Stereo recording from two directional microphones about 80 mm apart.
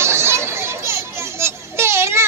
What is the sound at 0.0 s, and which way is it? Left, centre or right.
Children playing, right.